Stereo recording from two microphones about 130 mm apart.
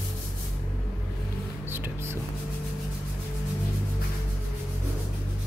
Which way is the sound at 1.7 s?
15° right (ahead or behind).